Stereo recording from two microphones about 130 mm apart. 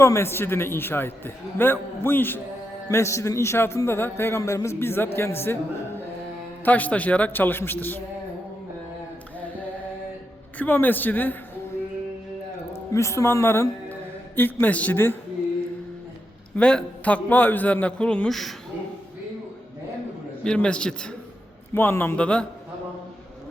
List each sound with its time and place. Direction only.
0.0 s a man's voice: 20° left (ahead or behind)
6.7 s a man's voice: 10° left (ahead or behind)
10.6 s a man's voice: 15° left (ahead or behind)
12.7 s a woman's voice: 20° left (ahead or behind)
16.6 s a man's voice: 10° left (ahead or behind)
20.4 s a man's voice: 5° left (ahead or behind)